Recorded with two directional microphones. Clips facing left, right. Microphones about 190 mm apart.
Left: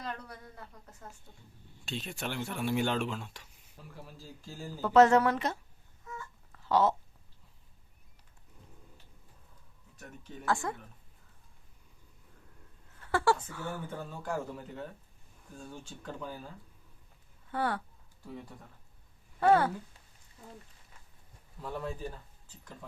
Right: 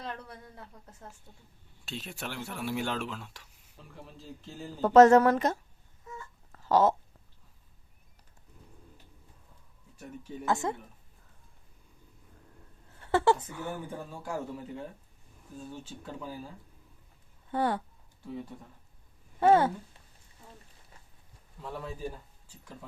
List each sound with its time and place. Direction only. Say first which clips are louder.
1.8 s speech: left 2 dB; 5° right (ahead or behind)
4.8 s speech: right 4 dB; 45° right (ahead or behind)
6.5 s a sound: right 3 dB; 40° right (ahead or behind)
10.4 s speech: right 2 dB; 20° right (ahead or behind)
13.0 s speech: right 3 dB; 25° right (ahead or behind); by 16.5 s 5° right (ahead or behind)
17.5 s speech: right 4 dB; 25° right (ahead or behind)
19.4 s speech: right 2 dB; 20° right (ahead or behind)
21.6 s speech: even; centre (ahead or behind)